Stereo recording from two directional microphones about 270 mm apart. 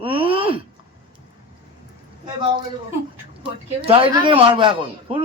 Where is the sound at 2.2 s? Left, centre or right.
Centre.